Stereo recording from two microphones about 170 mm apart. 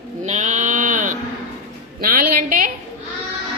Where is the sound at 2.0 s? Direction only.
55° right (ahead or behind).